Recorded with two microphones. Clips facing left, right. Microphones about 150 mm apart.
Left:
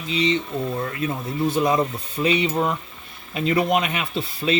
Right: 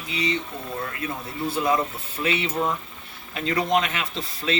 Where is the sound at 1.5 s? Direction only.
20° left (ahead or behind).